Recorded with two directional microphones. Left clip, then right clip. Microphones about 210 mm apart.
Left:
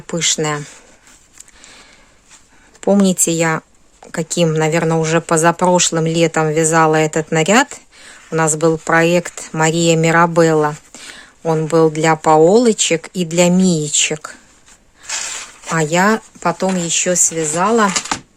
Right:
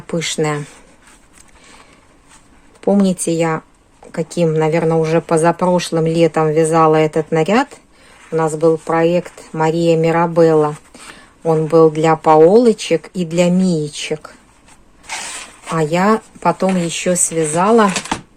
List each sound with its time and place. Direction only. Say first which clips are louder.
0.1 s speech: left 1 dB; 15° left (ahead or behind)
2.8 s speech: left 1 dB; 20° left (ahead or behind)
15.7 s speech: even; 25° left (ahead or behind)